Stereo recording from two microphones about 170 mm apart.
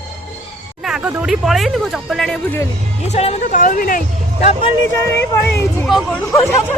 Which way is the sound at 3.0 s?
40° left (ahead or behind).